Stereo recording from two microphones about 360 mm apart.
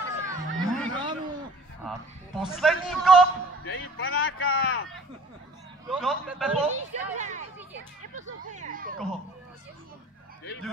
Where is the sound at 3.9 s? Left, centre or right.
Left.